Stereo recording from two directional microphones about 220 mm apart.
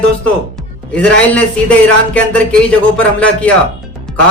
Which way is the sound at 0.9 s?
5° left (ahead or behind).